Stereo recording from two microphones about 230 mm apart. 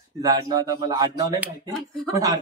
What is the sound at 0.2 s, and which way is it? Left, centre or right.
Speech, centre.